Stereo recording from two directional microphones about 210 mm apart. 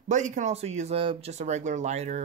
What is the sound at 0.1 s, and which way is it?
Speech, 35° right (ahead or behind).